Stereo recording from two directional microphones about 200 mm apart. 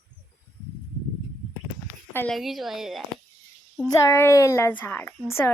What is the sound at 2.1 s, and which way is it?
Speech, 5° left (ahead or behind).